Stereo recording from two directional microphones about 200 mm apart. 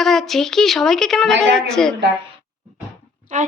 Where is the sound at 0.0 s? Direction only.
Centre (ahead or behind).